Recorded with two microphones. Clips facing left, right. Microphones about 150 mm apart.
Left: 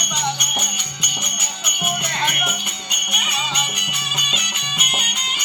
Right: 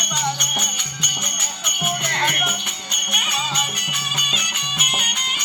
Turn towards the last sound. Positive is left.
turn(degrees=0)  # may be behind; listen again after turning